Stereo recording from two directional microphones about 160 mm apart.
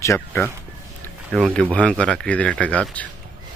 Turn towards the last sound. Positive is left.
turn(degrees=10)  # may be behind; listen again after turning